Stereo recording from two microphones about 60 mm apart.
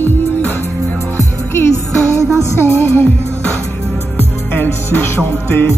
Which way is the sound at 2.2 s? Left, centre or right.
Right.